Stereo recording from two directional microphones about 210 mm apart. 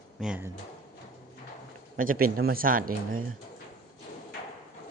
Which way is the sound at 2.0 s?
40° right (ahead or behind).